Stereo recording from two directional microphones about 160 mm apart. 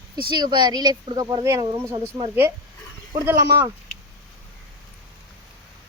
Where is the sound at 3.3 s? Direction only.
15° right (ahead or behind).